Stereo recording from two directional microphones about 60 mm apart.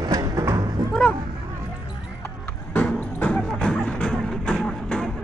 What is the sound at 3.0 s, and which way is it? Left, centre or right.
Music, left.